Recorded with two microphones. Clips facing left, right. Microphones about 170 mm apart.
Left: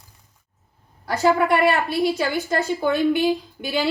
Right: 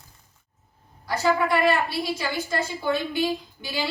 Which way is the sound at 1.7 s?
60° left (ahead or behind).